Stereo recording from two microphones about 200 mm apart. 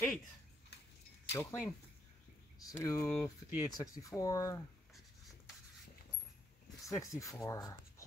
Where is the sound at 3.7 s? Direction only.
15° left (ahead or behind).